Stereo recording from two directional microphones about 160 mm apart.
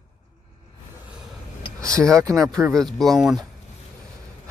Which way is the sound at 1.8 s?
20° right (ahead or behind).